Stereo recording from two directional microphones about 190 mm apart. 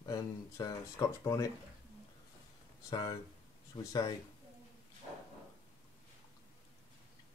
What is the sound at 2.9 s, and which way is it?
Speech, 20° left (ahead or behind).